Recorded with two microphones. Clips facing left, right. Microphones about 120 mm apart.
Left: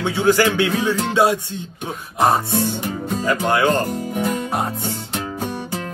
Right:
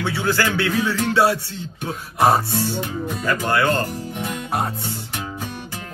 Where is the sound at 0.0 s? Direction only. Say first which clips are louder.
Left 5 dB; 20° left (ahead or behind).